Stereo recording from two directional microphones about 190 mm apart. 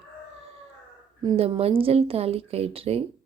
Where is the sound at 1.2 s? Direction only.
25° right (ahead or behind).